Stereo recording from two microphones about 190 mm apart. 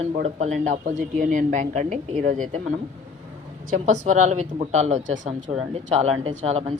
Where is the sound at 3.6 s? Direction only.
40° right (ahead or behind).